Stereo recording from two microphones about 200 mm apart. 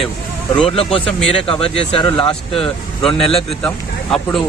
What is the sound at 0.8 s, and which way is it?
Speech, 30° left (ahead or behind).